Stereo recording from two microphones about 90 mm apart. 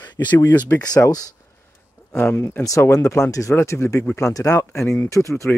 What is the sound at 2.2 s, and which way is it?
Speech, 30° left (ahead or behind).